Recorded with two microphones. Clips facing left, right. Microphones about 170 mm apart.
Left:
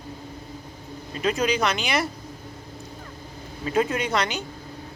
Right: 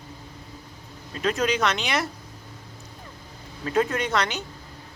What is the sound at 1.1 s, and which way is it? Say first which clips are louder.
Speech: left 1 dB; centre (ahead or behind).